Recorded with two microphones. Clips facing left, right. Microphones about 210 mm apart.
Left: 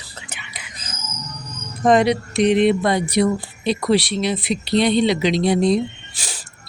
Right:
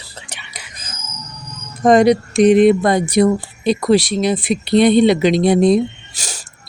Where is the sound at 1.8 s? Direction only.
45° right (ahead or behind).